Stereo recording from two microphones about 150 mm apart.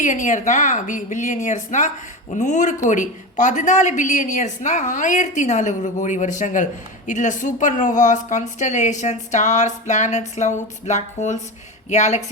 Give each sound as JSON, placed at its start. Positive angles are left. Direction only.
{"t": 0.0, "sound": "a woman's voice", "side_deg": 60}